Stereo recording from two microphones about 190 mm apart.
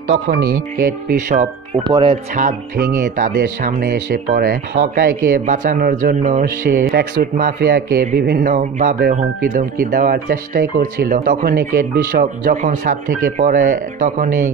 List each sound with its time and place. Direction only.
0.3 s speech: 55° right (ahead or behind)
1.8 s speech: 25° right (ahead or behind)
2.3 s speech: 50° right (ahead or behind)